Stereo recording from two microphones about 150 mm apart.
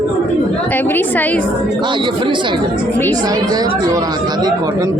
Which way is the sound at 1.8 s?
30° right (ahead or behind).